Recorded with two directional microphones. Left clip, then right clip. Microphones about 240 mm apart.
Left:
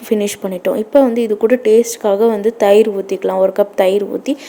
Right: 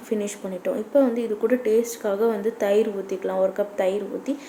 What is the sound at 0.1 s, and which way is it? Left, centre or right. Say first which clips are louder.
A woman's voice: left 10 dB; left.